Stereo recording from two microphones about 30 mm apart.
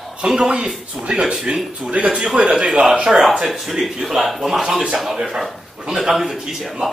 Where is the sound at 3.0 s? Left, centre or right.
Right.